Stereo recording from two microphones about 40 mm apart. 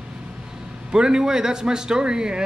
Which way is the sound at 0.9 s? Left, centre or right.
Centre.